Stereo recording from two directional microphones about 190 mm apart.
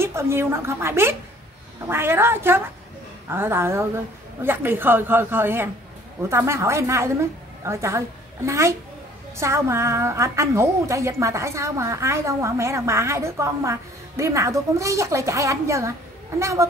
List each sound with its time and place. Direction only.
0.0 s a woman's voice: 15° right (ahead or behind)